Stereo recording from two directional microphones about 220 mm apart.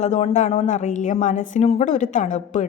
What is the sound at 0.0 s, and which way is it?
Speech, 30° left (ahead or behind).